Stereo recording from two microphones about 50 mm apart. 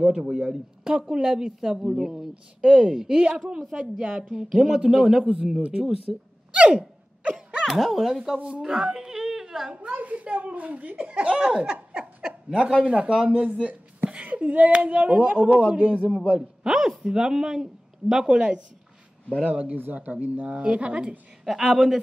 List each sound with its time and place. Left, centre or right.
0.0 s speech: centre
6.1 s a woman's voice: centre
6.5 s gasp: right
7.6 s speech: centre
8.5 s whimper: centre
9.9 s speech: right
13.4 s a woman's voice: right
16.0 s a man's voice: left
16.3 s speech: centre
19.5 s speech: right
20.5 s speech: right
21.5 s a woman's voice: centre